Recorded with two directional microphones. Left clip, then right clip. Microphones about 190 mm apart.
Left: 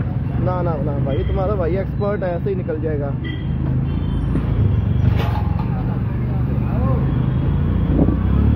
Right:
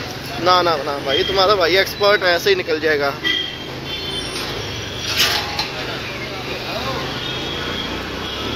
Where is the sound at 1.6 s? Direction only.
10° right (ahead or behind).